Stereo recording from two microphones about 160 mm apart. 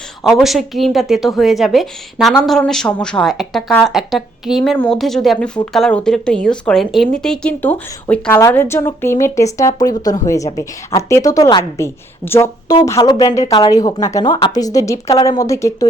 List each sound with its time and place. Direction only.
0.2 s a woman's voice: centre (ahead or behind); by 15.9 s 20° left (ahead or behind)